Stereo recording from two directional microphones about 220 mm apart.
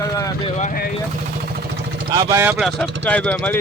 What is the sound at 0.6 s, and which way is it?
Speech, 40° left (ahead or behind).